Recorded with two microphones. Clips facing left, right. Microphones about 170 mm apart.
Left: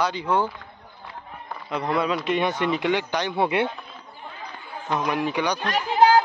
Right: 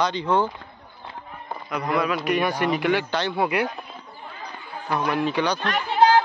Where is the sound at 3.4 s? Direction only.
25° left (ahead or behind).